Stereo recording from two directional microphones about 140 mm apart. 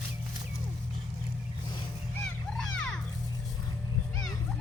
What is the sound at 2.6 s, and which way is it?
Music, 5° left (ahead or behind).